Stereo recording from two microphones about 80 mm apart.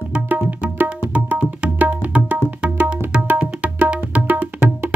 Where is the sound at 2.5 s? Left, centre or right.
Centre.